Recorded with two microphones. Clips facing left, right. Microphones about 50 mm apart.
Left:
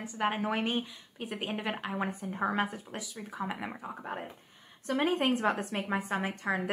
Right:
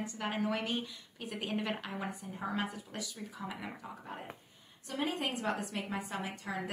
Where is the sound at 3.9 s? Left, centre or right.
Left.